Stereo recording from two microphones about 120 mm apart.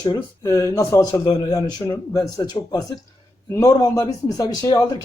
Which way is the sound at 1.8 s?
20° left (ahead or behind).